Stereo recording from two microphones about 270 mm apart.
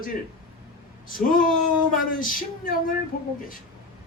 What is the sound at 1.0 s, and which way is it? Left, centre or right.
Speech, left.